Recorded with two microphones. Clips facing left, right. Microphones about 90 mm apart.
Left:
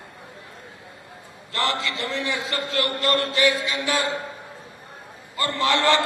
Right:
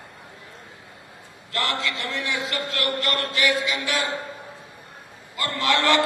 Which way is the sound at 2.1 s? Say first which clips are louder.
Left 1 dB; 30° left (ahead or behind).